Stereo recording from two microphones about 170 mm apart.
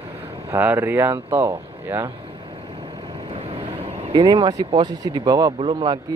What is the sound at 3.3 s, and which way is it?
Vehicle, 35° right (ahead or behind).